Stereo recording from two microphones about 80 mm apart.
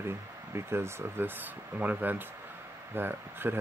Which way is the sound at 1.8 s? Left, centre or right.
Right.